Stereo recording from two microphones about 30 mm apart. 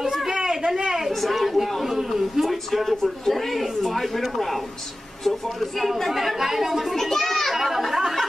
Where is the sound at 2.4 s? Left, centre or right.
Centre.